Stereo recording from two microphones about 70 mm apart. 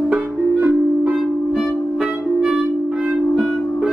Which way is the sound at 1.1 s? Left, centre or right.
Centre.